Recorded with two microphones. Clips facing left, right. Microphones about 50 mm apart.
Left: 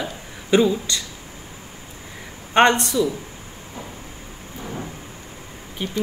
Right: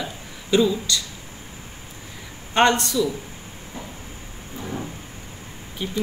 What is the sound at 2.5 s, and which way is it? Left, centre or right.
Speech, left.